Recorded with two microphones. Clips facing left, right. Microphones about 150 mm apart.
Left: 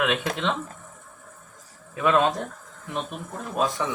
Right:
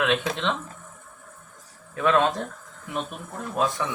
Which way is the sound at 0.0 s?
10° left (ahead or behind).